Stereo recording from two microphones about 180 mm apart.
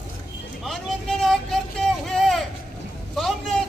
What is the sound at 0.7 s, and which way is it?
Vehicle, centre (ahead or behind).